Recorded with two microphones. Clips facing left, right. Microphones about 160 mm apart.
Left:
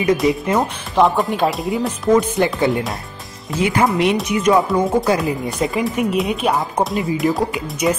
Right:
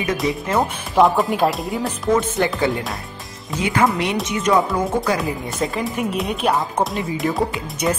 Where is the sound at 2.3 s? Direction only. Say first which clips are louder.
Left 2 dB; 20° left (ahead or behind).